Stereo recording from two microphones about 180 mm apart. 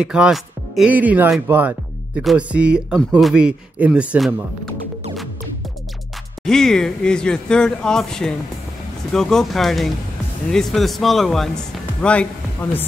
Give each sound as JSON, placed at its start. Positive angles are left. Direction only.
{"t": 0.0, "sound": "speech", "side_deg": -5}
{"t": 6.4, "sound": "speech", "side_deg": 5}